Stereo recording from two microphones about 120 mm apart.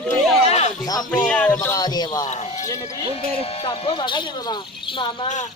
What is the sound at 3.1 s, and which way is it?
Speech, 55° left (ahead or behind).